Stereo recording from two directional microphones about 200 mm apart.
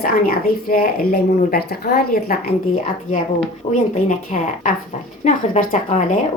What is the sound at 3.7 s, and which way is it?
Speech, 35° left (ahead or behind).